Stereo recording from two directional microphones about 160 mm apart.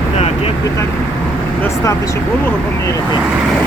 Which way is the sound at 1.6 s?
15° left (ahead or behind).